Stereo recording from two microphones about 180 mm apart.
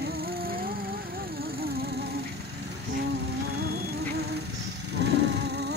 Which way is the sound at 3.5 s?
60° right (ahead or behind).